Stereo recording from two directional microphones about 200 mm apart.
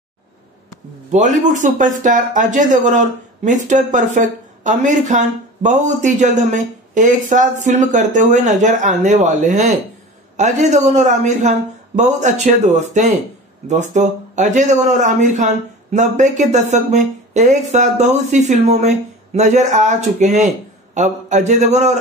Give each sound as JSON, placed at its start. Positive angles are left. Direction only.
{"t": 1.1, "sound": "speech", "side_deg": -35}